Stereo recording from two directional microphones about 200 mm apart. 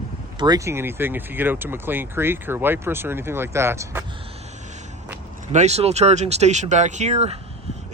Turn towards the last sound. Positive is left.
turn(degrees=-30)  # may be behind; listen again after turning